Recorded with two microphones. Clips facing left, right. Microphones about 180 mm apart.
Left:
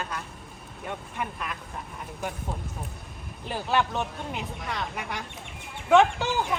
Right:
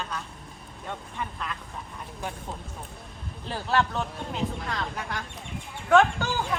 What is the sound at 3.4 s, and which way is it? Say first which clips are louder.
Speech: even; 15° left (ahead or behind).